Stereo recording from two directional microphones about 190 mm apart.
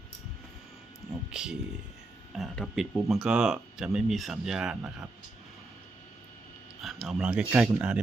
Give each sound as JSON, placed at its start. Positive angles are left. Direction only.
{"t": 1.3, "sound": "speech", "side_deg": -5}
{"t": 6.8, "sound": "speech", "side_deg": 0}